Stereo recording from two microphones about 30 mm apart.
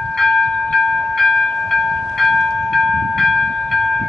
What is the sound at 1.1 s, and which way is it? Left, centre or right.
Train, centre.